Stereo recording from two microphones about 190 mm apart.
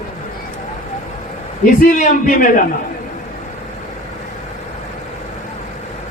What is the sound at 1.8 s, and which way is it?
Speech, 45° left (ahead or behind).